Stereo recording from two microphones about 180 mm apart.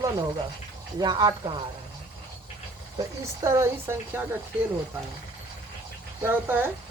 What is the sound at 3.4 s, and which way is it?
Speech, 15° right (ahead or behind).